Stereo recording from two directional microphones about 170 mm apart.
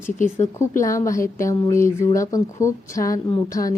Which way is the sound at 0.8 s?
20° left (ahead or behind).